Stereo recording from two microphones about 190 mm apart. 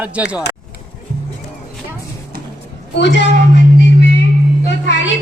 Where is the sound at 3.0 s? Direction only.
65° left (ahead or behind).